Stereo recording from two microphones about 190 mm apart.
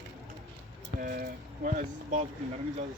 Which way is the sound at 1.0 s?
50° right (ahead or behind).